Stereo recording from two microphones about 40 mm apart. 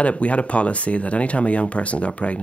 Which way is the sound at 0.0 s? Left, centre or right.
Left.